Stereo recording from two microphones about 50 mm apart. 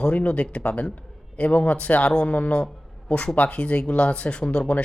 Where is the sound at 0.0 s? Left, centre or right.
Left.